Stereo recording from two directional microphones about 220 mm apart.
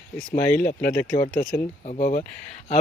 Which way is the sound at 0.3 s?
35° left (ahead or behind).